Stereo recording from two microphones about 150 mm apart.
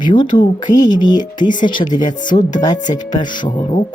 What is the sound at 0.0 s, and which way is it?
Speech, 30° left (ahead or behind).